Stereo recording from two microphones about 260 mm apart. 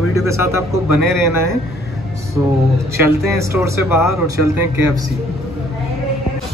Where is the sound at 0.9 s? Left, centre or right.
Left.